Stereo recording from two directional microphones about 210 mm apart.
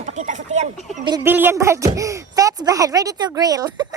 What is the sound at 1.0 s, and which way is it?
Speech, 15° right (ahead or behind).